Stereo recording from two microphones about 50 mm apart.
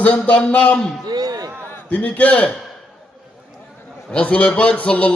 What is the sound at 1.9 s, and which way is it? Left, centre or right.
Speech, left.